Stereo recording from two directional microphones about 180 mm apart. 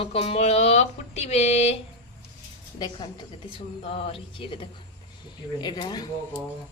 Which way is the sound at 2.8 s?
25° left (ahead or behind).